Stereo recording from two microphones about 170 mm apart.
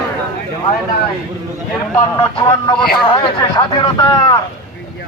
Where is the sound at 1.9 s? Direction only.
25° left (ahead or behind).